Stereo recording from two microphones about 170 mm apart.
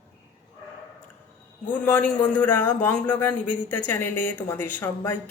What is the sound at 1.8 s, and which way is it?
A man's voice, 10° left (ahead or behind).